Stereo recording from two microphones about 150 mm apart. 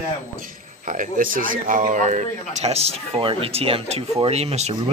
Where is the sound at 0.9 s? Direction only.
60° right (ahead or behind).